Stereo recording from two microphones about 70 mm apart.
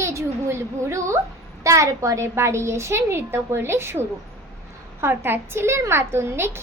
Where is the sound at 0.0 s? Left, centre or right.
Right.